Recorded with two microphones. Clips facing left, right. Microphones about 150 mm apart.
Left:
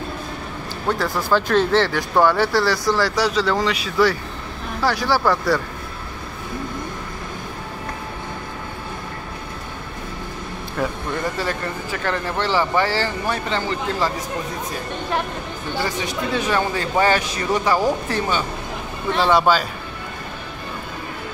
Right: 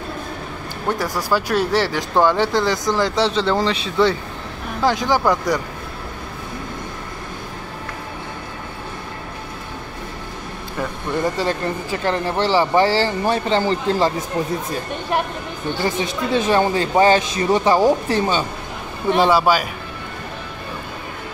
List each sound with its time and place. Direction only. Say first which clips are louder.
0.8 s speech: even; 15° right (ahead or behind)
11.3 s speech: right 4 dB; 25° right (ahead or behind)
16.3 s speech: right 5 dB; 25° right (ahead or behind)